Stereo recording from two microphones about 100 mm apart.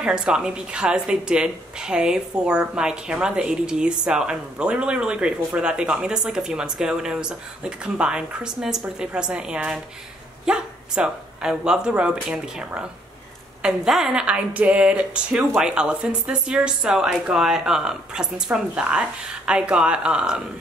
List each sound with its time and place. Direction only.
0.0 s speech: 10° right (ahead or behind)